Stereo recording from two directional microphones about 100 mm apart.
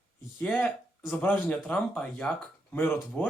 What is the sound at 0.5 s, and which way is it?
Speech, 15° left (ahead or behind).